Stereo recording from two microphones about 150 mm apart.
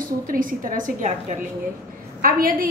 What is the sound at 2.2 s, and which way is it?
Speech, 70° right (ahead or behind).